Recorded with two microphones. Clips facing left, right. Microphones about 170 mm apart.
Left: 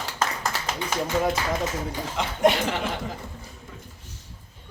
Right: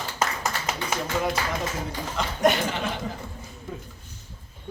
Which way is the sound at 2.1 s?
25° left (ahead or behind).